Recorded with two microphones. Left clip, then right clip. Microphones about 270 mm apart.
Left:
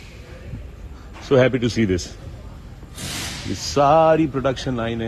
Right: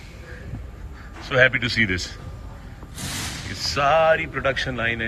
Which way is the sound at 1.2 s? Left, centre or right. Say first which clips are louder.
Left 1 dB; centre.